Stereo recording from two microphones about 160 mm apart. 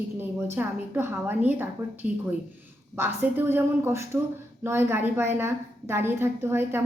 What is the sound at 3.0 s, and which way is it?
A woman's voice, 15° right (ahead or behind).